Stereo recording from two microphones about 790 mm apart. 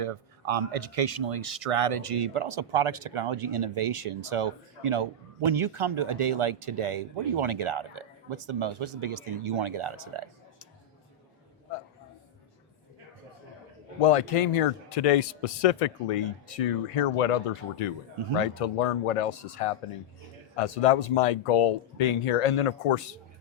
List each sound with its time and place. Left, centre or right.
0.0 s speech: right
14.0 s speech: left